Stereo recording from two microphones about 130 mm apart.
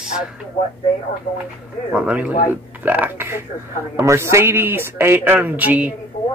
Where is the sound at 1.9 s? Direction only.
10° right (ahead or behind).